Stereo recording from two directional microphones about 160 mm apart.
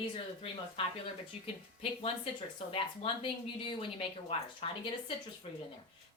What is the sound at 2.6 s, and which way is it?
Speech, 35° left (ahead or behind).